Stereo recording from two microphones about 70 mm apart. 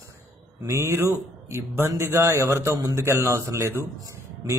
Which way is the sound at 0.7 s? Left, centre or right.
Right.